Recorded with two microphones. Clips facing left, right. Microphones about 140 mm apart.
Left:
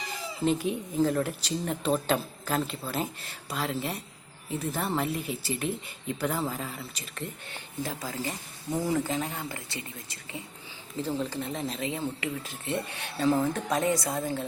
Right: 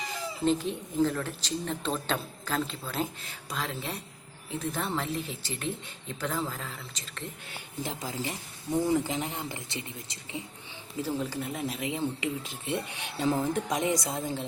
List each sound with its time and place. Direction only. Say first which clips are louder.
0.4 s speech: left 1 dB; 5° left (ahead or behind)
7.5 s a woman's voice: right 1 dB; 20° right (ahead or behind)
11.2 s speech: left 1 dB; 5° right (ahead or behind)